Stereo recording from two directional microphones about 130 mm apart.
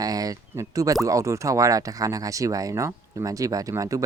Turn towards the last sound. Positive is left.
turn(degrees=-25)  # may be behind; listen again after turning